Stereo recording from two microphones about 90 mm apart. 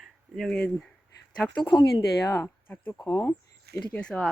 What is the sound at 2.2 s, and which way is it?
Speech, 35° left (ahead or behind).